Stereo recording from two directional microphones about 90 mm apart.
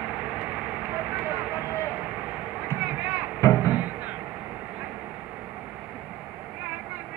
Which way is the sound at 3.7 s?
20° right (ahead or behind).